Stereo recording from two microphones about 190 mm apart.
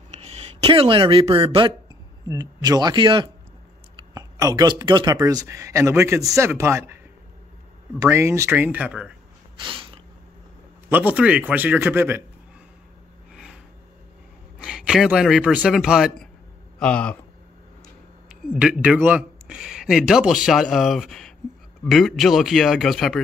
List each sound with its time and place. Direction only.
0.1 s speech: 35° right (ahead or behind); by 6.8 s 15° right (ahead or behind)
8.0 s speech: 15° right (ahead or behind)
9.6 s a sound: 25° right (ahead or behind)
10.9 s speech: 10° right (ahead or behind)
13.3 s a sound: 5° right (ahead or behind)
14.6 s a man's voice: 5° right (ahead or behind)
18.3 s a man's voice: 5° right (ahead or behind)